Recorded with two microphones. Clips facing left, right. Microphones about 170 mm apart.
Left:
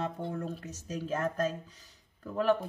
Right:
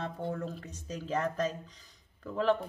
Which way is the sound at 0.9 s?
5° left (ahead or behind).